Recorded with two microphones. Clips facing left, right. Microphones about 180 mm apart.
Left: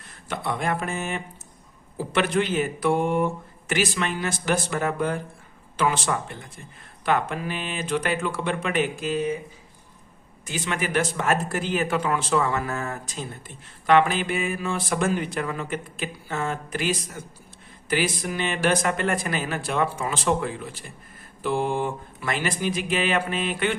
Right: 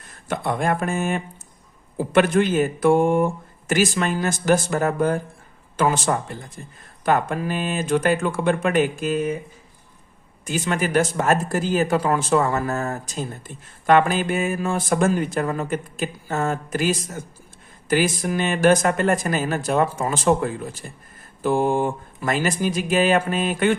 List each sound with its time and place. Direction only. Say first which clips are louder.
0.3 s speech: right 4 dB; 50° right (ahead or behind)
10.4 s speech: right 5 dB; 45° right (ahead or behind)